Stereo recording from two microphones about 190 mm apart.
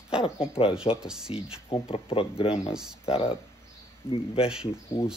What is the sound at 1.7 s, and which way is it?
Speech, 30° left (ahead or behind).